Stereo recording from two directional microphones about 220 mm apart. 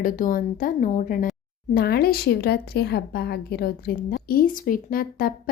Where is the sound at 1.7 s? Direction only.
45° left (ahead or behind).